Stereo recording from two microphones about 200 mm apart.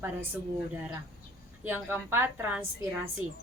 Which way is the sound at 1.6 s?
10° right (ahead or behind).